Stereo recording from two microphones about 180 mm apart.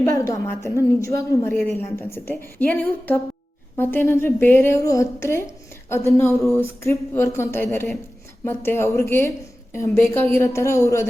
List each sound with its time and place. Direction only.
0.4 s a woman's voice: 15° left (ahead or behind)